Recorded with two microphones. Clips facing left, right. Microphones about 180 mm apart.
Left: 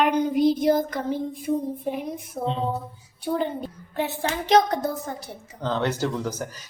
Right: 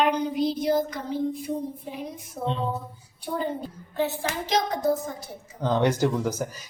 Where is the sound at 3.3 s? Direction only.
65° left (ahead or behind).